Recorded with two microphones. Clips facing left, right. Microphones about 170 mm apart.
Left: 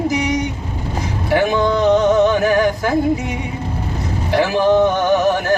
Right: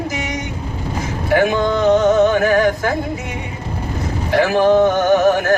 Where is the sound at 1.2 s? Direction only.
50° right (ahead or behind).